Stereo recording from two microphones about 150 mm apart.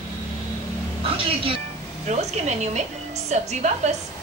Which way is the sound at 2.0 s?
50° right (ahead or behind).